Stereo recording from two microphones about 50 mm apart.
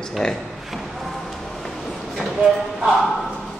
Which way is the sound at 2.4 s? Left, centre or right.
Centre.